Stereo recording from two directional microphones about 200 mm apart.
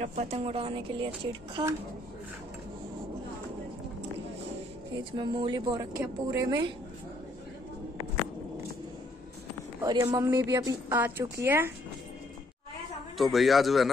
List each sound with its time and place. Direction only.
0.0 s speech: 35° right (ahead or behind)
5.1 s speech: 25° right (ahead or behind)
9.8 s a woman's voice: 15° right (ahead or behind)
13.2 s speech: centre (ahead or behind)